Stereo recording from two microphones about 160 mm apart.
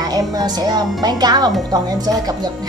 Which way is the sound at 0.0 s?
25° right (ahead or behind).